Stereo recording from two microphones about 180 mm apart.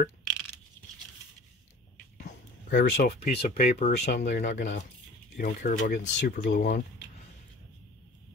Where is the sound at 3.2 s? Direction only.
35° left (ahead or behind).